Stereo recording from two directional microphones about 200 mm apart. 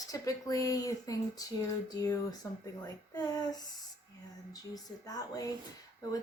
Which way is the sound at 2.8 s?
20° left (ahead or behind).